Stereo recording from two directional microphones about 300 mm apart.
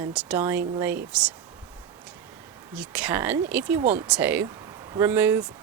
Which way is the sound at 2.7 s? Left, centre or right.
Centre.